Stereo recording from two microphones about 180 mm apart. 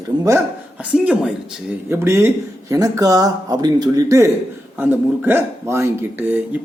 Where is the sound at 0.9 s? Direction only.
5° right (ahead or behind).